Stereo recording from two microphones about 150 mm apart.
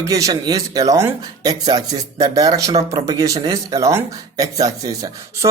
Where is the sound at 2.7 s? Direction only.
40° right (ahead or behind).